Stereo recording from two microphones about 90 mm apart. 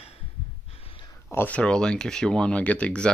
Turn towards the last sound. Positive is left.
turn(degrees=15)  # may be behind; listen again after turning